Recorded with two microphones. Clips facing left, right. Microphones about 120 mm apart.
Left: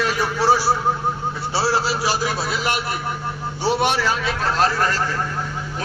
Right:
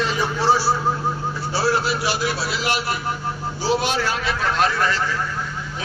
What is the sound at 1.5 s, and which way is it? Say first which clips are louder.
A man's voice: even; 30° left (ahead or behind).